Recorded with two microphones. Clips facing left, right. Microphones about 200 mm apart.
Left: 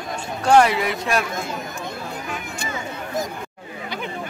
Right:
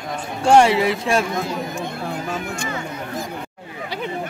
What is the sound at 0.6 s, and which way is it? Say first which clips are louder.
Speech: right 4 dB; 30° right (ahead or behind).